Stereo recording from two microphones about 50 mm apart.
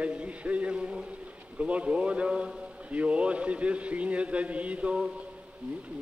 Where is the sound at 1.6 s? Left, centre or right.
Right.